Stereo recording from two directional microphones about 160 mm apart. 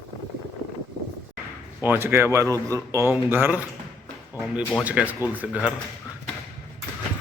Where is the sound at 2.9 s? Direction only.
15° right (ahead or behind).